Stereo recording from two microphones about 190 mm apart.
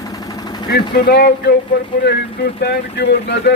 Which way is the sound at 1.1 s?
60° left (ahead or behind).